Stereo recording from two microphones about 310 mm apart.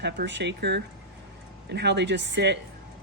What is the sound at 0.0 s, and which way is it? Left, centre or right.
A woman's voice, right.